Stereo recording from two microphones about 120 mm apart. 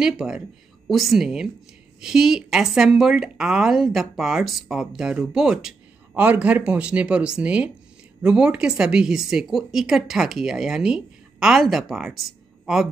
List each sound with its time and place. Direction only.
0.0 s a woman's voice: 5° right (ahead or behind)